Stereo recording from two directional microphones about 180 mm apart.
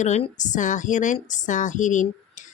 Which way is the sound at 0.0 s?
40° left (ahead or behind).